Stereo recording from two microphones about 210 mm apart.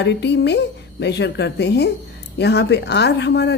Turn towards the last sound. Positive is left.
turn(degrees=55)  # may be behind; listen again after turning